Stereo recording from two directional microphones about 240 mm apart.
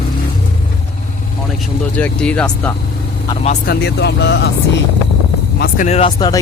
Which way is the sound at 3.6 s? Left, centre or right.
Left.